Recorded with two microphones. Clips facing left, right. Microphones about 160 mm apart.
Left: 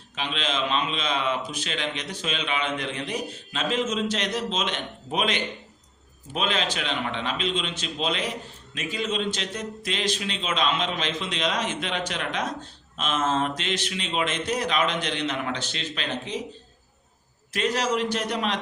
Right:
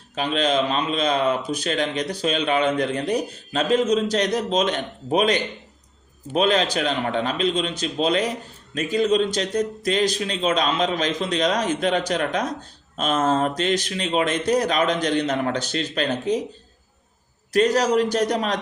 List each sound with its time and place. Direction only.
0.2 s a man's voice: 45° right (ahead or behind)
17.5 s a man's voice: 40° right (ahead or behind)